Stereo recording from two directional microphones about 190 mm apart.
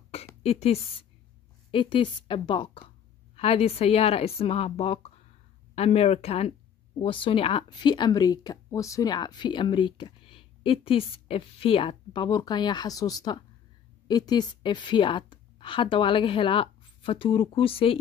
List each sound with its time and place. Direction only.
0.4 s a woman's voice: 30° left (ahead or behind)